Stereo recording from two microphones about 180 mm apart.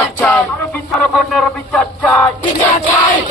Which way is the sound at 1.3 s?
5° left (ahead or behind).